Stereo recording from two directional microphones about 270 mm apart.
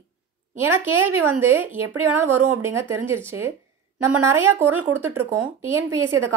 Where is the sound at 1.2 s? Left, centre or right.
Centre.